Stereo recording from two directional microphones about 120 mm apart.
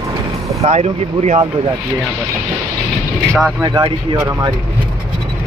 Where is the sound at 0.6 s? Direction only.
65° right (ahead or behind).